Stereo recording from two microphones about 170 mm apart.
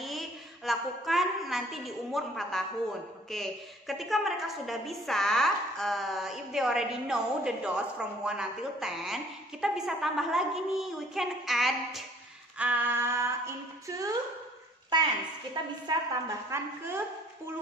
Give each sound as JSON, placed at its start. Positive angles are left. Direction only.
{"t": 0.0, "sound": "a woman's voice", "side_deg": 0}
{"t": 12.5, "sound": "female singing", "side_deg": -10}
{"t": 14.9, "sound": "a woman's voice", "side_deg": -25}
{"t": 15.5, "sound": "female singing", "side_deg": -20}